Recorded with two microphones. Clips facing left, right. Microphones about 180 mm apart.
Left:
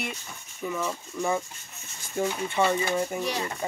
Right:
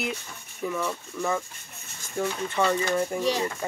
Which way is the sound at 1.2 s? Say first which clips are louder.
Left 1 dB; 15° left (ahead or behind).